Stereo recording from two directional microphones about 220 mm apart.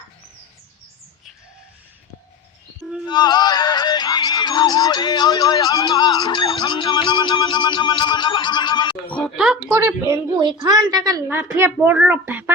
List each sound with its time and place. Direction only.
3.1 s speech: 20° left (ahead or behind)
9.0 s speech: 5° left (ahead or behind)
9.6 s a woman's voice: 10° right (ahead or behind)